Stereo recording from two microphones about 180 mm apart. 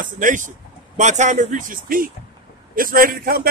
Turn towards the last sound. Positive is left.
turn(degrees=-55)  # may be behind; listen again after turning